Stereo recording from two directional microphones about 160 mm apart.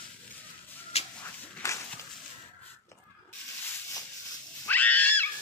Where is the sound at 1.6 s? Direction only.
20° left (ahead or behind).